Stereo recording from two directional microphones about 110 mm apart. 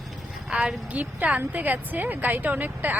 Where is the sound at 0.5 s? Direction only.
10° right (ahead or behind).